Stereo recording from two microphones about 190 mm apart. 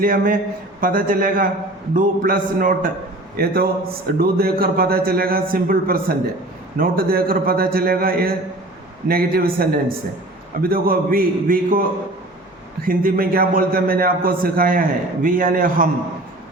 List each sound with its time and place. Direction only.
0.0 s a man's voice: 45° right (ahead or behind)
12.8 s a man's voice: 50° right (ahead or behind)